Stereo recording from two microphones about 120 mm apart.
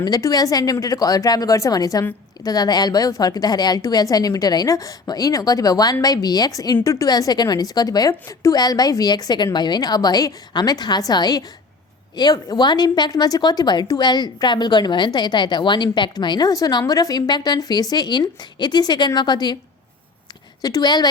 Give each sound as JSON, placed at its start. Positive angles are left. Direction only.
{"t": 0.0, "sound": "a woman's voice", "side_deg": 30}
{"t": 20.6, "sound": "a woman's voice", "side_deg": 30}